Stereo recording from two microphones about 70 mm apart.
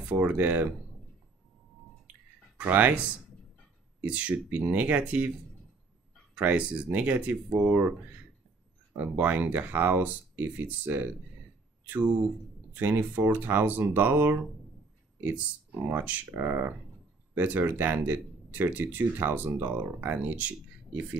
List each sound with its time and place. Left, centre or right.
0.0 s speech: centre
2.5 s speech: right
6.3 s speech: centre
12.7 s speech: right